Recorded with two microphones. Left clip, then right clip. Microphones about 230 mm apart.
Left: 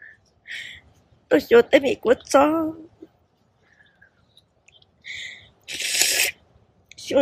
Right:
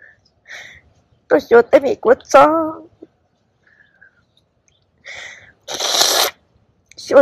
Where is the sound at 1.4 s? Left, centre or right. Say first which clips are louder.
Right 5 dB; centre.